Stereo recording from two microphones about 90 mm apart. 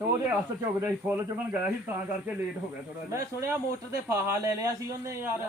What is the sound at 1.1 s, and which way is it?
Speech, 25° right (ahead or behind).